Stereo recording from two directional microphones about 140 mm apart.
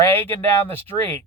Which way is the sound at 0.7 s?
15° left (ahead or behind).